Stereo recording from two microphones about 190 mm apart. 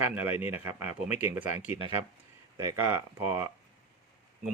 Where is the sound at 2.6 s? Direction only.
15° right (ahead or behind).